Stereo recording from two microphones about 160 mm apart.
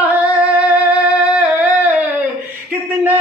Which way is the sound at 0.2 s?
20° left (ahead or behind).